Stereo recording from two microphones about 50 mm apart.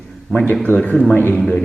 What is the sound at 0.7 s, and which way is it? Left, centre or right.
Speech, left.